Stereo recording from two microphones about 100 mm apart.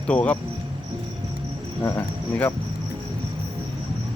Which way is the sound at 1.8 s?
20° left (ahead or behind).